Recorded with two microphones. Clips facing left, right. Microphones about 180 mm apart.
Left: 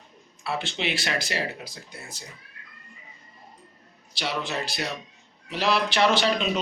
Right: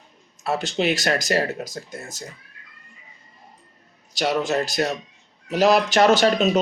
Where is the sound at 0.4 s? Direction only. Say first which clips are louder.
Right 7 dB; 45° right (ahead or behind).